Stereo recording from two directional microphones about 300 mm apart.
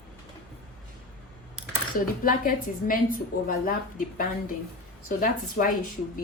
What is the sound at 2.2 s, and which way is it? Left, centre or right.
A woman's voice, left.